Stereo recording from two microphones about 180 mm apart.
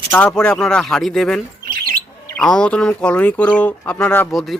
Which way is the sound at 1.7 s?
55° right (ahead or behind).